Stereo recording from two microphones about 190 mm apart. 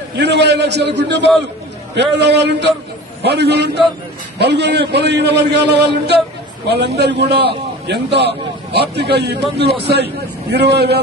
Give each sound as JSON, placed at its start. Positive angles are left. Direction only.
{"t": 0.2, "sound": "a man's voice", "side_deg": -65}